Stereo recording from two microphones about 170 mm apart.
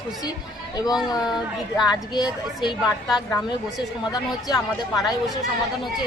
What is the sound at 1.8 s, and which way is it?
Speech, 25° left (ahead or behind).